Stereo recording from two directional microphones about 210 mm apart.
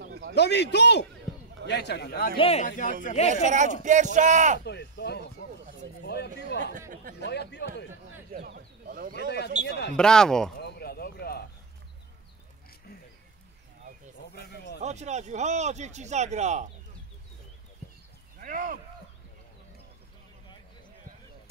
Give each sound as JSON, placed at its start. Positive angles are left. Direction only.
{"t": 0.3, "sound": "a man's voice", "side_deg": 55}
{"t": 2.3, "sound": "speech", "side_deg": 25}
{"t": 2.6, "sound": "speech", "side_deg": 40}
{"t": 3.3, "sound": "speech", "side_deg": -35}
{"t": 4.6, "sound": "a man's voice", "side_deg": 55}
{"t": 6.0, "sound": "a sound", "side_deg": 50}
{"t": 7.2, "sound": "a man's voice", "side_deg": 50}
{"t": 8.3, "sound": "a sound", "side_deg": -50}
{"t": 9.1, "sound": "a man's voice", "side_deg": 50}
{"t": 9.9, "sound": "speech", "side_deg": 5}
{"t": 10.6, "sound": "a sound", "side_deg": 50}
{"t": 14.3, "sound": "a sound", "side_deg": 50}
{"t": 14.8, "sound": "speech", "side_deg": -35}
{"t": 18.4, "sound": "speech", "side_deg": -40}